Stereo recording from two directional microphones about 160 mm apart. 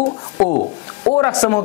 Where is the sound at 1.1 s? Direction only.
15° left (ahead or behind).